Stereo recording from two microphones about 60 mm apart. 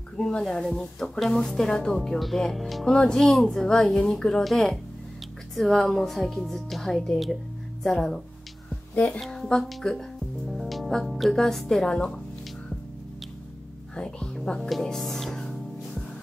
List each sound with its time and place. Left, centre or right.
0.2 s speech: centre
8.9 s speech: left
9.2 s speech: centre
13.9 s speech: centre